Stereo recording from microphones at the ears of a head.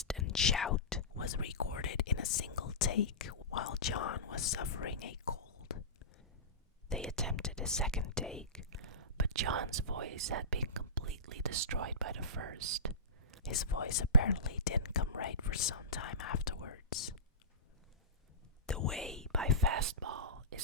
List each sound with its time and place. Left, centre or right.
0.3 s whispering: left
7.0 s whispering: centre
8.9 s whispering: right
10.8 s speech: right
13.4 s speech: left
18.9 s speech: centre
19.5 s whispering: right